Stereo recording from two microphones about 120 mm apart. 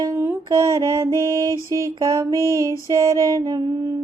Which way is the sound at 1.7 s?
25° right (ahead or behind).